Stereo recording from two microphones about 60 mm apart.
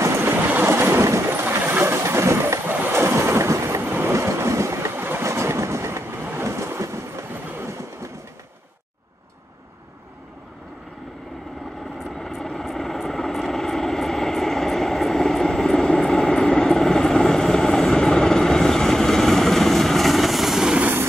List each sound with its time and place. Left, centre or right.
0.0 s boat: right
1.0 s vehicle: right
1.3 s vehicle: right
3.0 s train: right
3.8 s vehicle: right
4.1 s boat: right
4.9 s train: right
5.2 s train: right
6.3 s boat: right
12.2 s vehicle: centre